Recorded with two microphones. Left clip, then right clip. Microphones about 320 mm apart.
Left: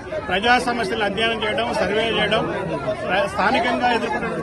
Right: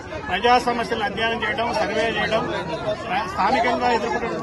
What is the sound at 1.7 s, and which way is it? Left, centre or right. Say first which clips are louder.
Speech: left 2 dB; right.